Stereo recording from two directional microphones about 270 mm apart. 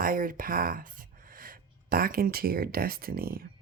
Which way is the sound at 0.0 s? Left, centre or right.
Right.